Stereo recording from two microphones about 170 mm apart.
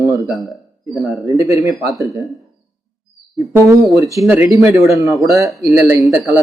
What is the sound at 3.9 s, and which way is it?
A man's voice, 20° right (ahead or behind).